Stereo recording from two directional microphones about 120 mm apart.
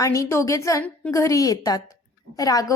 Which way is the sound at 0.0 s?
25° left (ahead or behind).